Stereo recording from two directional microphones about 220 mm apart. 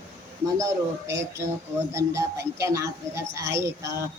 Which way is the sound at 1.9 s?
15° right (ahead or behind).